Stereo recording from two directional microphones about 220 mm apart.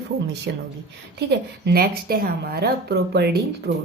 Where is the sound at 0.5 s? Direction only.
50° right (ahead or behind).